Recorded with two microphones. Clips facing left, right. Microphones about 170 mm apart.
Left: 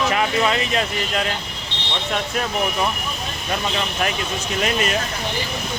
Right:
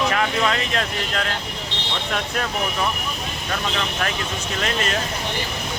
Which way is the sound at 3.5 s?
15° left (ahead or behind).